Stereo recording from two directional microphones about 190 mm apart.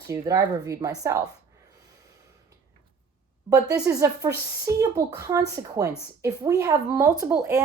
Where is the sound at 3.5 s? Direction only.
20° right (ahead or behind).